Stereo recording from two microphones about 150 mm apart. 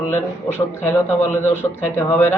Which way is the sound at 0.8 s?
15° left (ahead or behind).